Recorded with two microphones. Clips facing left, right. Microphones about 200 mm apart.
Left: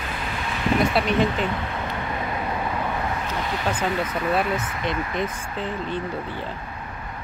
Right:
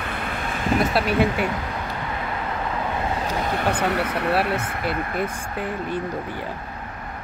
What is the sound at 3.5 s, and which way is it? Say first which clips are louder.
Speech: right 2 dB; 65° right (ahead or behind).